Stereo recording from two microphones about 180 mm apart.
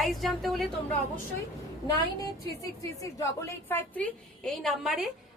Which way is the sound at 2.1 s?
20° left (ahead or behind).